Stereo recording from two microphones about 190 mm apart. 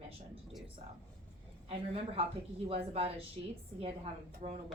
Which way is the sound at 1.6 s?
30° right (ahead or behind).